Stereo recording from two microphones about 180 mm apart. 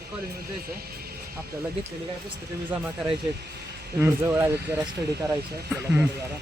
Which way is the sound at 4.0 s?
15° right (ahead or behind).